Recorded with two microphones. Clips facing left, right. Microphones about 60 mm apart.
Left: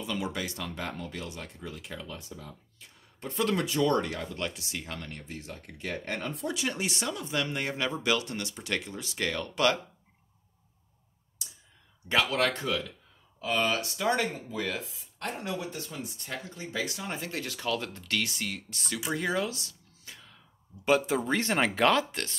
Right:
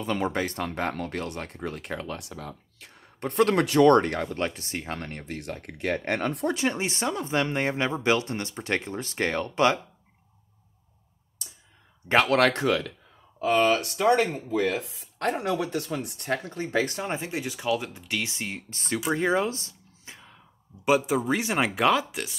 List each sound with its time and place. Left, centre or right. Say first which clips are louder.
0.0 s speech: right 6 dB; right
4.4 s speech: right 5 dB; right
5.2 s speech: right 7 dB; right
6.5 s speech: right 5 dB; right
12.3 s speech: right 7 dB; right
13.4 s speech: right 7 dB; right
14.9 s speech: right 9 dB; right
17.1 s speech: right 5 dB; centre
20.8 s speech: right 3 dB; centre